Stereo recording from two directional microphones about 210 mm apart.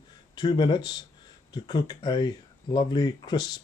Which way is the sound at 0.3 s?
20° left (ahead or behind).